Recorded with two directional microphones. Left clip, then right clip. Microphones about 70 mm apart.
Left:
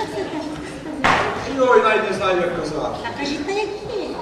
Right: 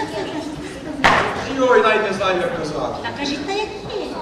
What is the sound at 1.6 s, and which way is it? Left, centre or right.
A man's voice, centre.